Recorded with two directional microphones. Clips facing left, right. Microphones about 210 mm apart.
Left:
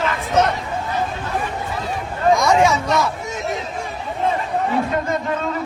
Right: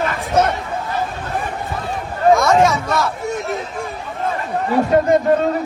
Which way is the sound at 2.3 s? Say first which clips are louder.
Right 2 dB; 15° left (ahead or behind).